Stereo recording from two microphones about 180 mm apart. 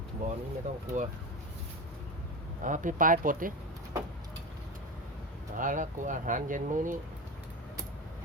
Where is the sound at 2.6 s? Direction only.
45° right (ahead or behind).